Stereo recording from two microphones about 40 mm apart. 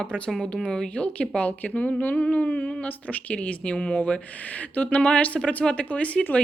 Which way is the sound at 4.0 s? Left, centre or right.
Left.